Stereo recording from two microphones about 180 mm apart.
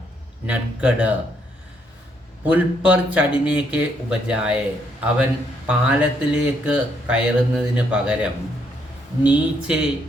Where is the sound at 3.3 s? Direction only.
30° left (ahead or behind).